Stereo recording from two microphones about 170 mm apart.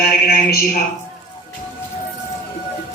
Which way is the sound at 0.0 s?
65° left (ahead or behind).